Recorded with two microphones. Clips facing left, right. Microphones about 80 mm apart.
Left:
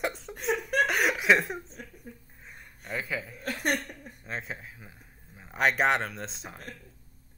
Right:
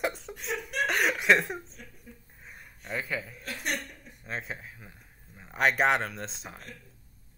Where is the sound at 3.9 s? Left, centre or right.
Left.